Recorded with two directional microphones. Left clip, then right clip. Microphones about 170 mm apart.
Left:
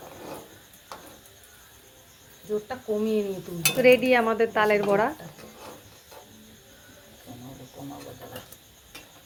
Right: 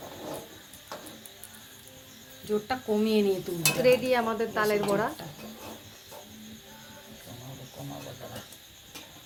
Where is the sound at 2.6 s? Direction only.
30° right (ahead or behind).